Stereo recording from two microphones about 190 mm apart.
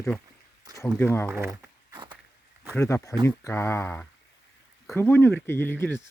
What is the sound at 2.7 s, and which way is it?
Speech, 15° left (ahead or behind).